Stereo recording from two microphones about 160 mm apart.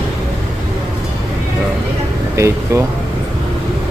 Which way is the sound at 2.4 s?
15° right (ahead or behind).